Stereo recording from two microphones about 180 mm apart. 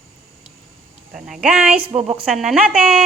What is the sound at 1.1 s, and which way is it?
Speech, centre (ahead or behind).